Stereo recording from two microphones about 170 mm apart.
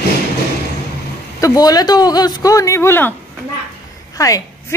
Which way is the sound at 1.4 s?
20° left (ahead or behind).